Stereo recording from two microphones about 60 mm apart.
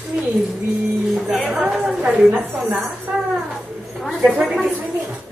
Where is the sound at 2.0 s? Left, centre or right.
Centre.